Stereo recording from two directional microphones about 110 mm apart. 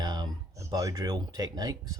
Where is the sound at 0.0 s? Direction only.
40° right (ahead or behind).